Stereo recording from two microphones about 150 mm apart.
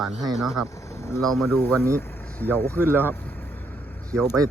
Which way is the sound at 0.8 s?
20° left (ahead or behind).